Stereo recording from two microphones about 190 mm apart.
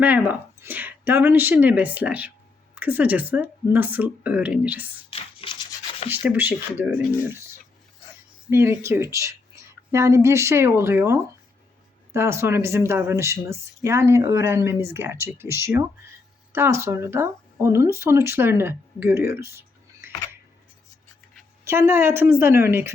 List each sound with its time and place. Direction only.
0.0 s speech: 10° right (ahead or behind)
5.1 s rub: 25° left (ahead or behind)
6.1 s speech: 10° right (ahead or behind)
8.4 s speech: 15° right (ahead or behind)
21.6 s speech: 15° right (ahead or behind)